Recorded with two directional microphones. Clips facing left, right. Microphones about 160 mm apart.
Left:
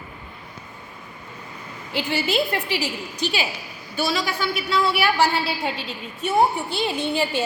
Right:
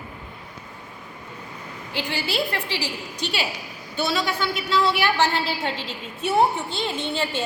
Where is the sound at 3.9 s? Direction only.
10° left (ahead or behind).